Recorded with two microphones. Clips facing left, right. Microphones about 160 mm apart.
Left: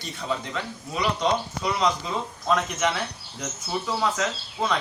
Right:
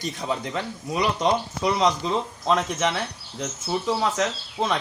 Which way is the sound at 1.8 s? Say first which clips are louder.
Right 2 dB; 30° right (ahead or behind).